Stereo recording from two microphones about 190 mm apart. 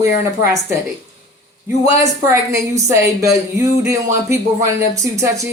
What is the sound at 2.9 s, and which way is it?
Speech, 15° right (ahead or behind).